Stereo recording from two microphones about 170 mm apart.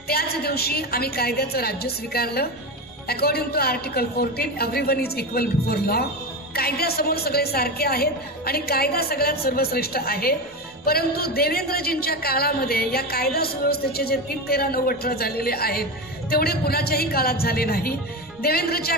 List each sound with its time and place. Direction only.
0.1 s a woman's voice: 65° left (ahead or behind)